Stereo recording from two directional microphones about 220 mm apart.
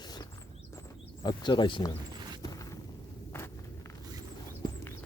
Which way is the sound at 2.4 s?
15° left (ahead or behind).